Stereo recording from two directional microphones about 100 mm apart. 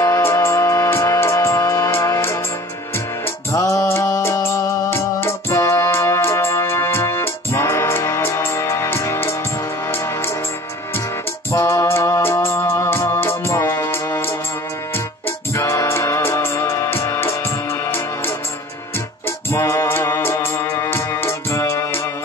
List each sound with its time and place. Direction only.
0.0 s music: 30° left (ahead or behind)
3.5 s music: 30° left (ahead or behind)
11.5 s music: 30° left (ahead or behind)
15.5 s music: 30° left (ahead or behind)
19.5 s music: 30° left (ahead or behind)